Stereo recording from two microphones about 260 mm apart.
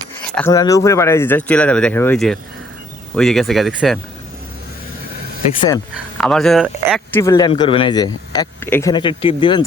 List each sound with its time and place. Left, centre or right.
0.3 s speech: centre
6.1 s speech: centre
7.2 s speech: centre